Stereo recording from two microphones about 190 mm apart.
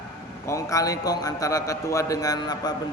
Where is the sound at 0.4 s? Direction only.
15° left (ahead or behind).